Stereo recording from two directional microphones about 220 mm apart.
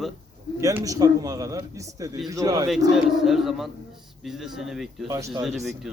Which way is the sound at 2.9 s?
Centre (ahead or behind).